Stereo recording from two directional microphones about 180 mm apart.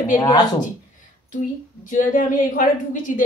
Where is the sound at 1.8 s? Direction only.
45° left (ahead or behind).